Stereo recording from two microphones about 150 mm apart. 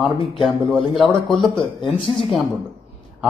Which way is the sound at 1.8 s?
35° left (ahead or behind).